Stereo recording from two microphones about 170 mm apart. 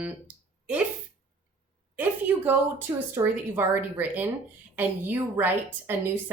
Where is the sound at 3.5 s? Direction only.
10° right (ahead or behind).